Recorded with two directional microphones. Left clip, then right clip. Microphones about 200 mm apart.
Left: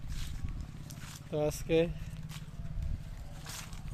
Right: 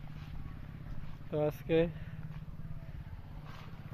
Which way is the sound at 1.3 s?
10° left (ahead or behind).